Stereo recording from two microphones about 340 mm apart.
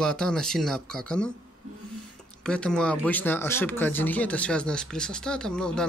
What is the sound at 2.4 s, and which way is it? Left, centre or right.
Speech, centre.